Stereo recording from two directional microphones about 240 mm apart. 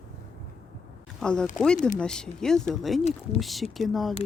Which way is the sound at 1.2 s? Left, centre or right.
Centre.